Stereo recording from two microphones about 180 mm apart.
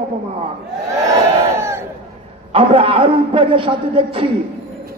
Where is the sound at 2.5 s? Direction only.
30° right (ahead or behind).